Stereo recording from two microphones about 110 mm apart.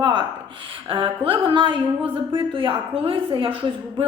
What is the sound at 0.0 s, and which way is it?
A woman's voice, 45° right (ahead or behind).